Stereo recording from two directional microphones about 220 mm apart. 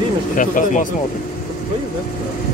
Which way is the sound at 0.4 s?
35° left (ahead or behind).